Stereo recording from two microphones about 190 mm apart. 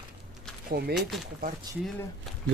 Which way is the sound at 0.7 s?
55° right (ahead or behind).